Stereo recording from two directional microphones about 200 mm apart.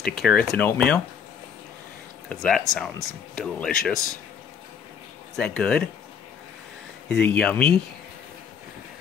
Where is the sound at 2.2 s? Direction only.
5° left (ahead or behind).